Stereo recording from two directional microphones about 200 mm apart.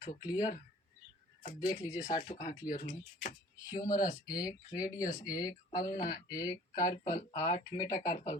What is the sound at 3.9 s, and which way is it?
Speech, 40° left (ahead or behind).